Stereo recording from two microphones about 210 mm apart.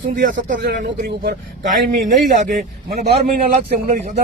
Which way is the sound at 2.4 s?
35° right (ahead or behind).